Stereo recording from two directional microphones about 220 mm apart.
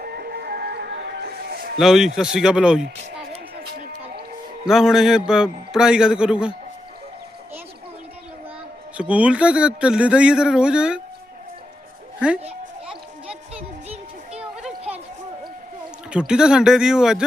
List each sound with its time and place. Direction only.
0.0 s music: 45° right (ahead or behind)
1.8 s speech: centre (ahead or behind)
3.8 s music: 35° right (ahead or behind)
4.6 s speech: centre (ahead or behind)
9.0 s speech: 5° right (ahead or behind)
13.2 s music: 25° right (ahead or behind)
14.3 s a sound: 5° right (ahead or behind)
16.0 s speech: 5° right (ahead or behind)